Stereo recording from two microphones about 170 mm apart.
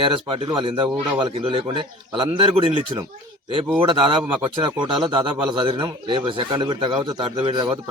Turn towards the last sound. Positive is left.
turn(degrees=-30)  # may be behind; listen again after turning